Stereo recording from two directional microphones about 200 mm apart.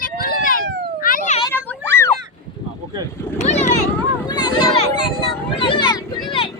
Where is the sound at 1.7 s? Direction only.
10° left (ahead or behind).